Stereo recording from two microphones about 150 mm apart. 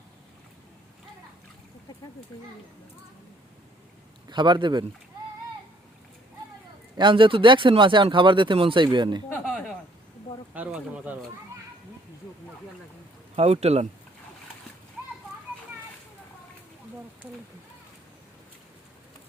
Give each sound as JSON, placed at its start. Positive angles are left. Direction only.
{"t": 4.3, "sound": "speech", "side_deg": -30}
{"t": 6.9, "sound": "speech", "side_deg": -30}
{"t": 9.4, "sound": "a sound", "side_deg": 0}
{"t": 10.5, "sound": "speech", "side_deg": -10}
{"t": 13.3, "sound": "a man's voice", "side_deg": -45}